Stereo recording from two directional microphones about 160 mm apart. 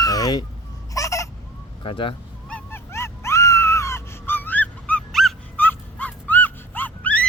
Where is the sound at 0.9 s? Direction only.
20° left (ahead or behind).